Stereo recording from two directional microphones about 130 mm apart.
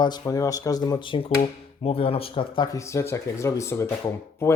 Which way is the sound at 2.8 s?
20° left (ahead or behind).